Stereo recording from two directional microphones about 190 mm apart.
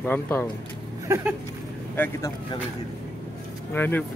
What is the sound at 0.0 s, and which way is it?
Speech, 10° left (ahead or behind).